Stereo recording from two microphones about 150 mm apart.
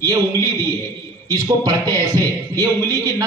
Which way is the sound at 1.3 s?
25° right (ahead or behind).